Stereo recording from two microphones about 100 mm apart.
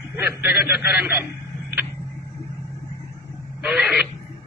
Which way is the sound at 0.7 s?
5° right (ahead or behind).